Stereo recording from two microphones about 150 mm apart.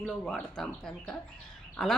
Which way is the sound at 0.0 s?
5° left (ahead or behind).